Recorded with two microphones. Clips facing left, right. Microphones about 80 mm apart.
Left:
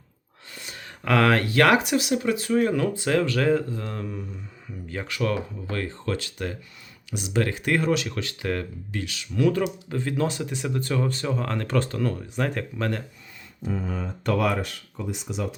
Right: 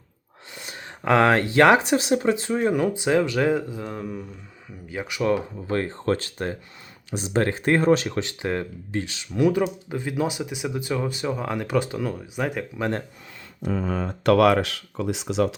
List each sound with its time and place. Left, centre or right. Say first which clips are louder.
0.6 s speech: right 5 dB; right; by 12.9 s centre
13.6 s speech: right 4 dB; right